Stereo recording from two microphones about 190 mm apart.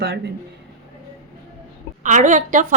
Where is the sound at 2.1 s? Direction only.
40° right (ahead or behind).